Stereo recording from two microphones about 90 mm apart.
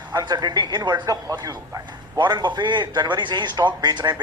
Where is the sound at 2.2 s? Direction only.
55° right (ahead or behind).